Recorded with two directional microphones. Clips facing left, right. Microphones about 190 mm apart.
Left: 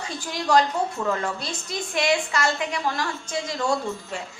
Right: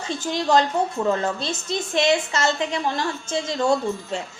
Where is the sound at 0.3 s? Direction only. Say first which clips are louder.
Right 1 dB; 25° right (ahead or behind).